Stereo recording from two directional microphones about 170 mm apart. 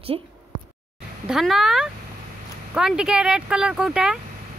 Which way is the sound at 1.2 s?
Centre (ahead or behind).